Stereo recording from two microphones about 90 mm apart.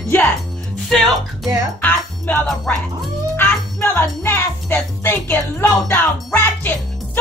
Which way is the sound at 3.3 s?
25° left (ahead or behind).